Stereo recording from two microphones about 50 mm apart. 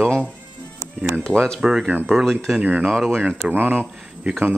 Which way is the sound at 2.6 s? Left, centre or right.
Right.